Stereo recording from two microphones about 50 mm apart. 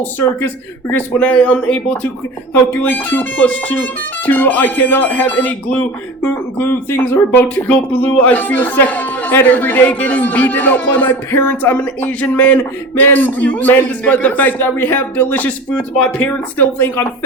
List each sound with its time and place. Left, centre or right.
0.2 s speech: left
1.2 s speech: left
2.8 s speech: left
7.7 s speech: left